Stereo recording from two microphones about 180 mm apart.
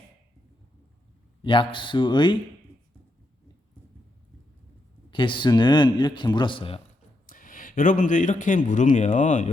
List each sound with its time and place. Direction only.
1.4 s a man's voice: 30° left (ahead or behind)
5.1 s a man's voice: 25° left (ahead or behind)
7.3 s a man's voice: 50° left (ahead or behind)